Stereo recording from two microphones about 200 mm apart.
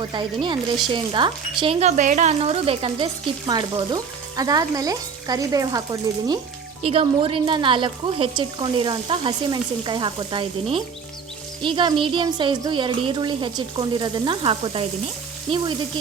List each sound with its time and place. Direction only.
0.0 s speech: 25° right (ahead or behind)